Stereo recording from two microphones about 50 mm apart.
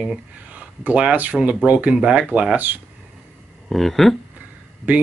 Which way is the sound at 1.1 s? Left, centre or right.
Right.